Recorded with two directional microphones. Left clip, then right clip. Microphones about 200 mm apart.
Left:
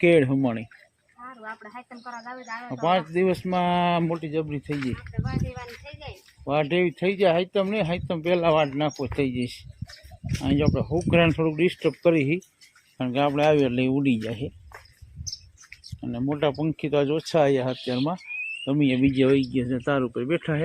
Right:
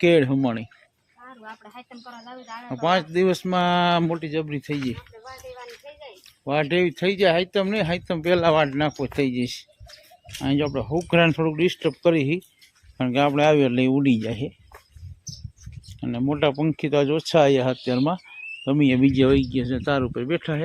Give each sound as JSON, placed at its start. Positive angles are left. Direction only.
{"t": 0.0, "sound": "speech", "side_deg": -10}
{"t": 2.1, "sound": "speech", "side_deg": 5}
{"t": 3.1, "sound": "speech", "side_deg": -15}
{"t": 5.2, "sound": "speech", "side_deg": 55}
{"t": 6.4, "sound": "speech", "side_deg": -10}
{"t": 13.0, "sound": "speech", "side_deg": -20}
{"t": 16.0, "sound": "speech", "side_deg": -20}